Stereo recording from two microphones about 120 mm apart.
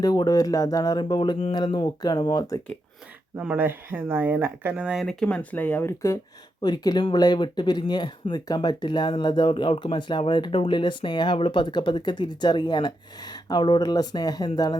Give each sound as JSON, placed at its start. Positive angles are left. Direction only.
{"t": 0.0, "sound": "speech", "side_deg": 35}
{"t": 3.3, "sound": "speech", "side_deg": -15}
{"t": 5.0, "sound": "speech", "side_deg": 10}
{"t": 6.6, "sound": "speech", "side_deg": 35}